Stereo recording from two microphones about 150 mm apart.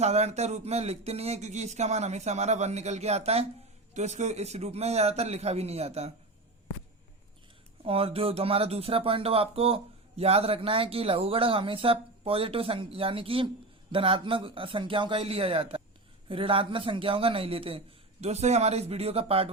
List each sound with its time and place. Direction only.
0.0 s speech: 45° right (ahead or behind)
7.9 s speech: 40° right (ahead or behind)